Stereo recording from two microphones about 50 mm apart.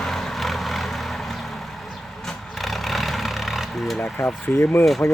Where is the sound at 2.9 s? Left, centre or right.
Centre.